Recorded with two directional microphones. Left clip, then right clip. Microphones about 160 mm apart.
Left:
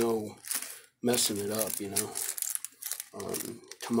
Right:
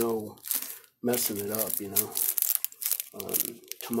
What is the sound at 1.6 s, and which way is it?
Speech, 15° right (ahead or behind).